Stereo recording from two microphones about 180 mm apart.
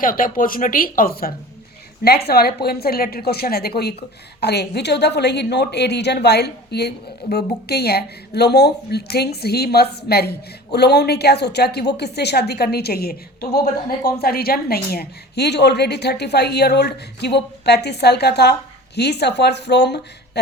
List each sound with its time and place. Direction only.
0.0 s a woman's voice: 50° left (ahead or behind); by 20.4 s 70° left (ahead or behind)